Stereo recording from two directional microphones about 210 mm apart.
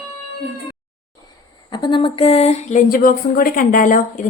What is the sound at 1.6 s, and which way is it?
Speech, 20° left (ahead or behind).